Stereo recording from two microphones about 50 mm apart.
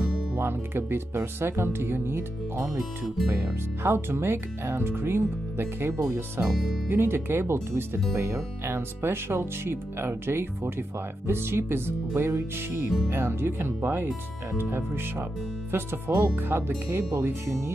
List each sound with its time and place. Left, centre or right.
0.0 s speech: right
3.8 s speech: right
6.4 s speech: centre
6.9 s speech: right